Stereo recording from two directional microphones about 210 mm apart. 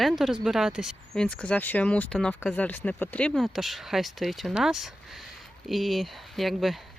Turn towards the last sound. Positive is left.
turn(degrees=0)  # may be behind; listen again after turning